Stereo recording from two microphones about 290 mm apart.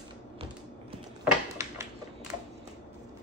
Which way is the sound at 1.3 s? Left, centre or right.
Centre.